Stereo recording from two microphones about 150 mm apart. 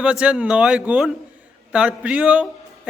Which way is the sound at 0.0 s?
5° right (ahead or behind).